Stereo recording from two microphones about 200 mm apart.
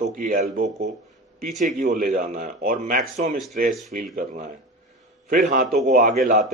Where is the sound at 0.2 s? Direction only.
40° right (ahead or behind).